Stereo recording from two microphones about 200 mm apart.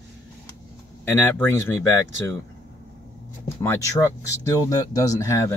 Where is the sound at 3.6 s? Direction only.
10° left (ahead or behind).